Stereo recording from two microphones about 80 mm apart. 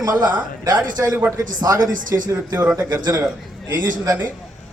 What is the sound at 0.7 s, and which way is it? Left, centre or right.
Speech, right.